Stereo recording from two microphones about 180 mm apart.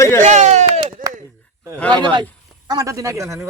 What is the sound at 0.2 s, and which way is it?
Chop, 40° right (ahead or behind).